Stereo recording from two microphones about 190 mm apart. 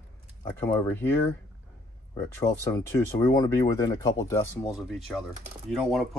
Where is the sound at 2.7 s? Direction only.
15° left (ahead or behind).